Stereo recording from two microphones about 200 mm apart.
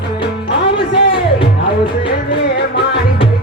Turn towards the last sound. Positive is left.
turn(degrees=25)  # may be behind; listen again after turning